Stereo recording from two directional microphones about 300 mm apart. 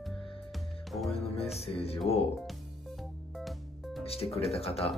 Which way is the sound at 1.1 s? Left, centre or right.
Centre.